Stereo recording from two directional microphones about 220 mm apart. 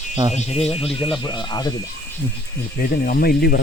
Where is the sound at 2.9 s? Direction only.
40° left (ahead or behind).